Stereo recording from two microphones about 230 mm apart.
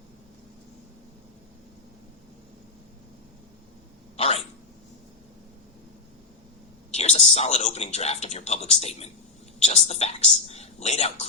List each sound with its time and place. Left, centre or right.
4.2 s dog: left
6.9 s speech: left